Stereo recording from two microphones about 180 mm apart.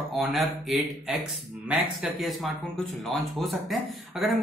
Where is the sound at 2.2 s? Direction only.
Centre (ahead or behind).